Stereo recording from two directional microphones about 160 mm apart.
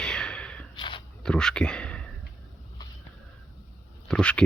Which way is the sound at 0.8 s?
30° left (ahead or behind).